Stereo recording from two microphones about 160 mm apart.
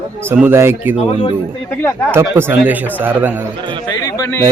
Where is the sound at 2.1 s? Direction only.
15° right (ahead or behind).